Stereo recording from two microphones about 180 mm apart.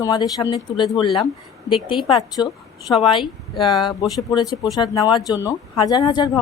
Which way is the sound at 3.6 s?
25° left (ahead or behind).